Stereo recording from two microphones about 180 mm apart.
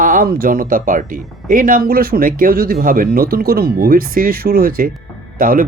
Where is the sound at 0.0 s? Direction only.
50° right (ahead or behind).